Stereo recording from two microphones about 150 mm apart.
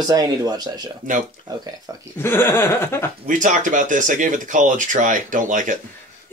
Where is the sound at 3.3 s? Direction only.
60° right (ahead or behind).